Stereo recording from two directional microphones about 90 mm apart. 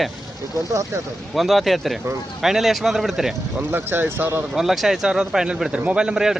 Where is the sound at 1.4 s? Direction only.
Centre (ahead or behind).